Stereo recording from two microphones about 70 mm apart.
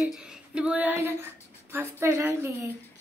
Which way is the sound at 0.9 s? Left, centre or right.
Right.